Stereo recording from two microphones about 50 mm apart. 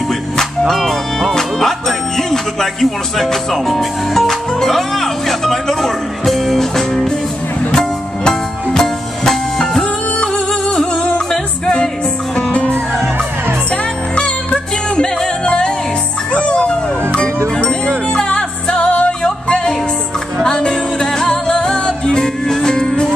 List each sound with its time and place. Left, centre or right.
0.1 s music: centre
1.3 s speech: centre
7.7 s music: centre
10.1 s music: centre
12.5 s music: left